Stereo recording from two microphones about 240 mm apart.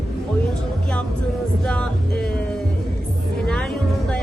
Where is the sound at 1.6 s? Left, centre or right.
Centre.